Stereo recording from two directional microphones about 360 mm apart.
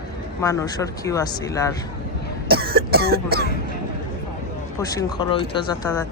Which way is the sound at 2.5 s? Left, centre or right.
Right.